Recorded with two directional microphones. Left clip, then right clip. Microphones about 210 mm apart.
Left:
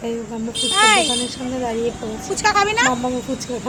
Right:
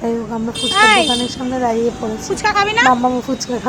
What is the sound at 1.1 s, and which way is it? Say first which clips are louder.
Speech: right 4 dB; 20° right (ahead or behind).